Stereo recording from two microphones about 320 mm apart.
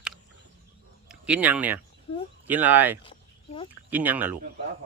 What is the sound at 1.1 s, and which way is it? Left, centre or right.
A child's voice, centre.